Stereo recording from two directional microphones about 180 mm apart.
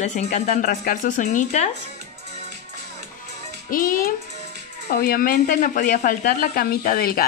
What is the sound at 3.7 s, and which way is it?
Speech, 50° left (ahead or behind).